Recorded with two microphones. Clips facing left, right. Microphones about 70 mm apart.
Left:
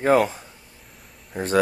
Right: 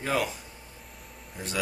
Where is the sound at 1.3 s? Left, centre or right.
Left.